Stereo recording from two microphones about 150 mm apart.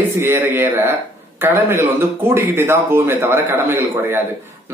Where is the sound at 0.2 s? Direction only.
15° right (ahead or behind).